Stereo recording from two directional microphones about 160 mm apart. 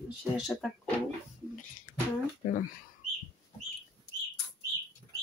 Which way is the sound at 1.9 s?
55° left (ahead or behind).